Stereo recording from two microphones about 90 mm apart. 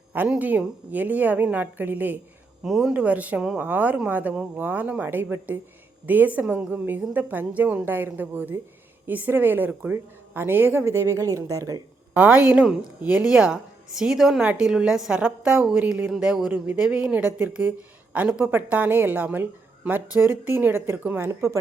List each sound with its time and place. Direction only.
0.3 s speech: 20° right (ahead or behind)
2.6 s speech: centre (ahead or behind)
2.9 s a woman's voice: 15° right (ahead or behind); by 11.8 s 40° right (ahead or behind)
12.1 s a woman's voice: 15° right (ahead or behind)